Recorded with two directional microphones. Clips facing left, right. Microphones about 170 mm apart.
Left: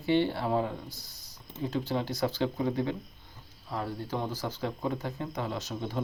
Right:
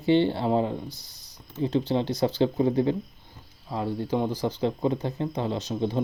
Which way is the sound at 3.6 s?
20° right (ahead or behind).